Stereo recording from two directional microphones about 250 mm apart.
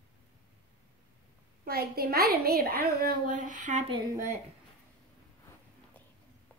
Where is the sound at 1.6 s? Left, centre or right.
Right; by 4.4 s centre.